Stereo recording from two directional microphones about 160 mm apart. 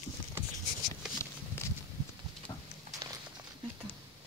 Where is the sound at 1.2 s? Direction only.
15° left (ahead or behind).